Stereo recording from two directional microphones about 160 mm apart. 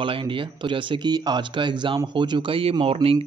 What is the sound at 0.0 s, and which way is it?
Speech, 30° right (ahead or behind).